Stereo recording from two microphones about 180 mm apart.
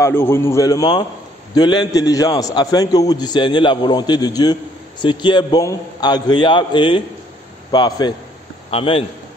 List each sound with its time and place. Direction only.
0.0 s a man's voice: 15° left (ahead or behind); by 9.0 s 30° left (ahead or behind)